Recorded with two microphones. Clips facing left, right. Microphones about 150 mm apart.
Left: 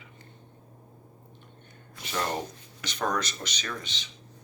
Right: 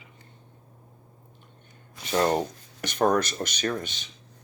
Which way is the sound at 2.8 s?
55° right (ahead or behind).